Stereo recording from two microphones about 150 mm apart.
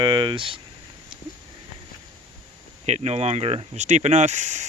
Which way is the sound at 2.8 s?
45° right (ahead or behind).